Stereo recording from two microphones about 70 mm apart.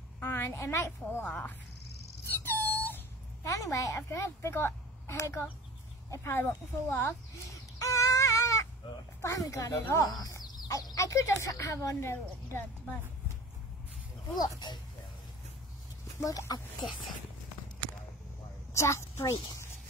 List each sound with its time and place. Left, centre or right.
0.2 s a sound: left
0.6 s a woman's voice: left
1.2 s speech: centre
2.2 s a sound: left
3.4 s a woman's voice: left
7.5 s a sound: left
9.2 s a woman's voice: left
10.7 s a sound: left
11.0 s a woman's voice: left
14.3 s speech: left
16.2 s speech: left
18.7 s a child's voice: left